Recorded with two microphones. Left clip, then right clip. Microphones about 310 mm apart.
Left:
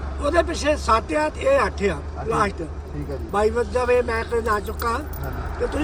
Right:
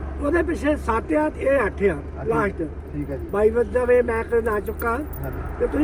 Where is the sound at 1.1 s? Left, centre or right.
Centre.